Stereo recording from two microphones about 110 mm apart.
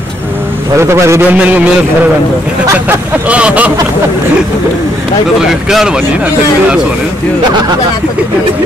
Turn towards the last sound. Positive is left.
turn(degrees=-40)  # may be behind; listen again after turning